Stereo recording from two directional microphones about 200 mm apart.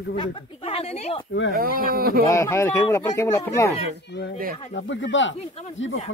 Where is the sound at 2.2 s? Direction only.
15° left (ahead or behind).